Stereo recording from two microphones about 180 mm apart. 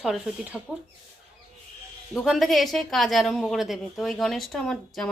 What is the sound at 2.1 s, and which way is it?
A woman's voice, centre (ahead or behind).